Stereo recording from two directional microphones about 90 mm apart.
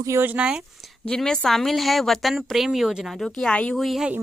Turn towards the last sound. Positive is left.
turn(degrees=0)  # may be behind; listen again after turning